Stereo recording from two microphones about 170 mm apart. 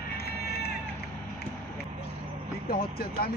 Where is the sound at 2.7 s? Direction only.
60° left (ahead or behind).